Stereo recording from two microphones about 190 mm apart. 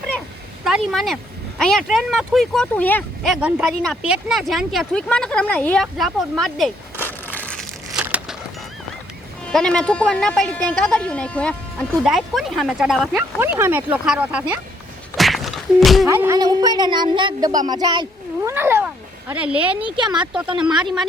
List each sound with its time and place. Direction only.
0.6 s speech: centre (ahead or behind)
7.0 s crushing: 10° left (ahead or behind)
7.9 s a sound: 5° right (ahead or behind)
9.5 s speech: 5° left (ahead or behind)
15.1 s a sound: centre (ahead or behind)
16.0 s a child's voice: 15° right (ahead or behind)
18.5 s cat: 10° right (ahead or behind)
19.3 s speech: 5° right (ahead or behind)